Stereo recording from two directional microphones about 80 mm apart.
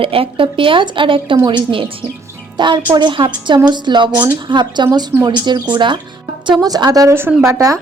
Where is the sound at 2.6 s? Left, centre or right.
Right.